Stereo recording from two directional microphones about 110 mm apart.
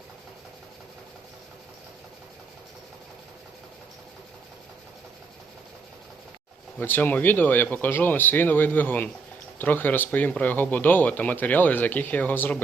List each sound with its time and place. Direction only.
6.7 s speech: 15° left (ahead or behind)